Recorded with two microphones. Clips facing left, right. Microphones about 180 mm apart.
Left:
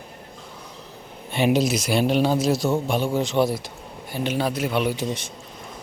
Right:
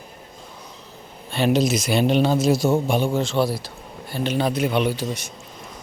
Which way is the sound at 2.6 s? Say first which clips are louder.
Right 3 dB; 15° right (ahead or behind).